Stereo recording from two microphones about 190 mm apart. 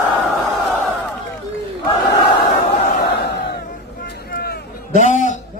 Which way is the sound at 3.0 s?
60° left (ahead or behind).